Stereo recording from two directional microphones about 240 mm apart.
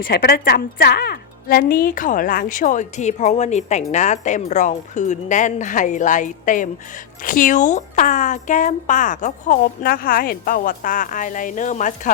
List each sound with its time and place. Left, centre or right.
0.0 s speech: left